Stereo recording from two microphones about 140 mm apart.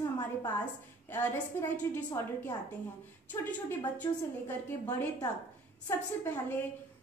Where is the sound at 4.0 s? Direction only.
15° left (ahead or behind).